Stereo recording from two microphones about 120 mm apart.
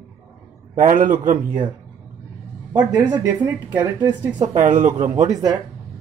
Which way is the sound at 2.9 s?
35° right (ahead or behind).